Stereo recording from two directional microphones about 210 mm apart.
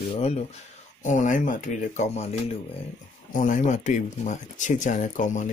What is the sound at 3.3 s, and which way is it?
Speech, 40° left (ahead or behind).